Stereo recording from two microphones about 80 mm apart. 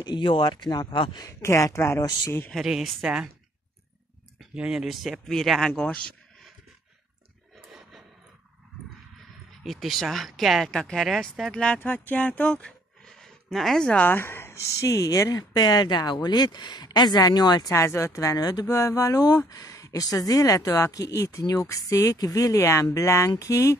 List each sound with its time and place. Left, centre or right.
0.0 s speech: left
0.8 s speech: left
1.2 s speech: left
2.5 s speech: centre
4.6 s speech: centre
5.8 s a sound: centre
9.6 s speech: centre
11.5 s speech: centre
13.0 s a sound: centre
14.0 s speech: left
17.7 s speech: left
18.4 s speech: left
22.6 s speech: left